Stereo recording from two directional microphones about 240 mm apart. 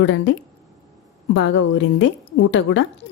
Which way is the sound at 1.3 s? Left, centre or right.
Left.